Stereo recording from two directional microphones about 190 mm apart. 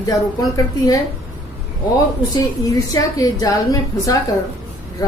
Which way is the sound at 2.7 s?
20° left (ahead or behind).